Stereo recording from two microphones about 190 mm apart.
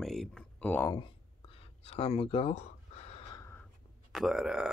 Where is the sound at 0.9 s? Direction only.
30° left (ahead or behind).